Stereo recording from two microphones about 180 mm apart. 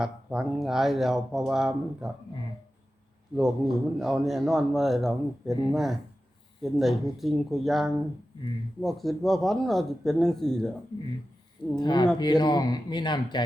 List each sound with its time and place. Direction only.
0.0 s speech: 5° right (ahead or behind)
3.3 s speech: centre (ahead or behind)
11.8 s speech: 25° left (ahead or behind)